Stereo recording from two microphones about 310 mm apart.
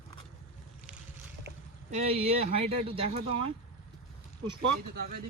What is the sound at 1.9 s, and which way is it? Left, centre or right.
Speech, centre.